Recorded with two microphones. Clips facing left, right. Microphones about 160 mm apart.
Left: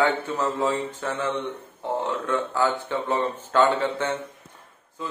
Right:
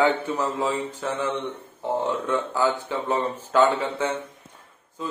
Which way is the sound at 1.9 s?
10° right (ahead or behind).